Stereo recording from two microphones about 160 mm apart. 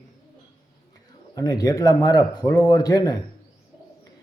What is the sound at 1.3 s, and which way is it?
A man's voice, 25° left (ahead or behind).